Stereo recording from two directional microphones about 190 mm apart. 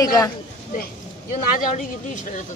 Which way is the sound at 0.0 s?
15° left (ahead or behind).